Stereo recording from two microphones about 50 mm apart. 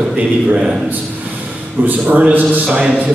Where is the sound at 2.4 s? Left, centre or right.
Right.